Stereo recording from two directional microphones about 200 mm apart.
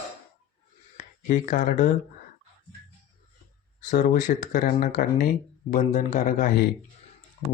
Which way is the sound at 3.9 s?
40° left (ahead or behind).